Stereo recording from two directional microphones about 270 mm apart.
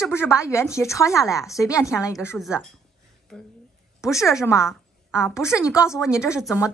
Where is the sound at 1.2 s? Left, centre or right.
Centre.